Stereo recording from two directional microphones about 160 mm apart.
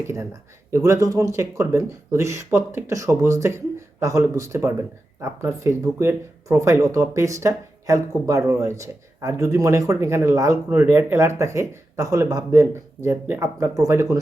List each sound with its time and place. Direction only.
0.0 s speech: 15° right (ahead or behind)